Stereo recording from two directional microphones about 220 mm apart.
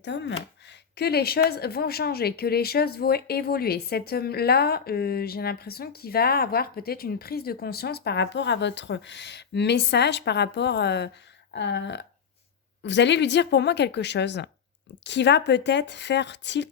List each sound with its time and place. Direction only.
0.0 s a woman's voice: 55° left (ahead or behind)